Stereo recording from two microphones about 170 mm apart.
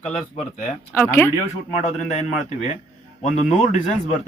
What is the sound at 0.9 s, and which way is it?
Speech, 15° left (ahead or behind).